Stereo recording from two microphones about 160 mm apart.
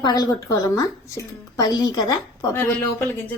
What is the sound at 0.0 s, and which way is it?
A woman's voice, 25° left (ahead or behind).